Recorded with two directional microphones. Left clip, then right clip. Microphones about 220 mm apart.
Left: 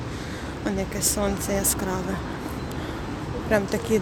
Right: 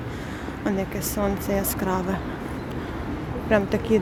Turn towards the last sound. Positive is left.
turn(degrees=-10)  # may be behind; listen again after turning